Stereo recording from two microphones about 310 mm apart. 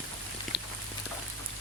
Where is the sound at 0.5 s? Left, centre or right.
Left.